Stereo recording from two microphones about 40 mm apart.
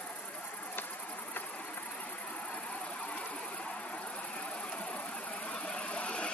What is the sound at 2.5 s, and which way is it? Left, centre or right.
Engine, left.